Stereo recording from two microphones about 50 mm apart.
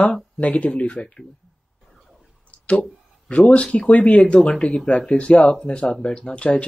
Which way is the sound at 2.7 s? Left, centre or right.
Left.